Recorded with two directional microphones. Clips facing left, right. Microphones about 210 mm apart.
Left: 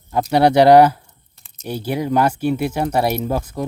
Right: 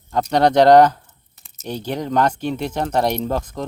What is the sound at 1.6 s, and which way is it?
Speech, 10° left (ahead or behind).